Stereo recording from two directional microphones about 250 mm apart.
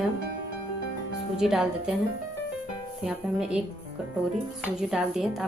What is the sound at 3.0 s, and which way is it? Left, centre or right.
Speech, centre.